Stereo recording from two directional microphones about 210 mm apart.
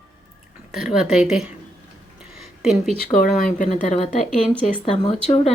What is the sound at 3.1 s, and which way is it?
Speech, 40° left (ahead or behind).